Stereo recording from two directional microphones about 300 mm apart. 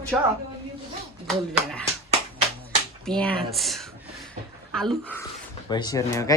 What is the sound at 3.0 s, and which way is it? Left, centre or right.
A woman's voice, centre.